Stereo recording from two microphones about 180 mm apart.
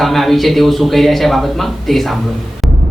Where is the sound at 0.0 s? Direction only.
Centre (ahead or behind).